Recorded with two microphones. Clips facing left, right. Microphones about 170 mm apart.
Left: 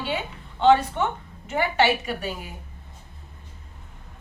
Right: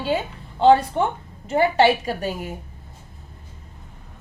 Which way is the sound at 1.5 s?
35° right (ahead or behind).